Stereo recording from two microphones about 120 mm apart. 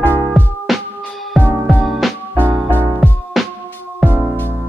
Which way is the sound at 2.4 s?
15° right (ahead or behind).